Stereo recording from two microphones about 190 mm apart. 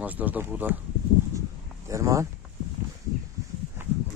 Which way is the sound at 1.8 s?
15° right (ahead or behind).